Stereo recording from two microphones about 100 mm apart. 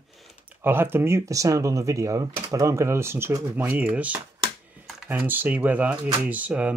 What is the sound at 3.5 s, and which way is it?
Speech, 15° right (ahead or behind).